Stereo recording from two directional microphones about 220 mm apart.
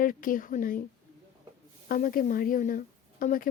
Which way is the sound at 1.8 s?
40° left (ahead or behind).